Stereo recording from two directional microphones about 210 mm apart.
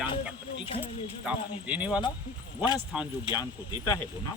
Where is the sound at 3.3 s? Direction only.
20° left (ahead or behind).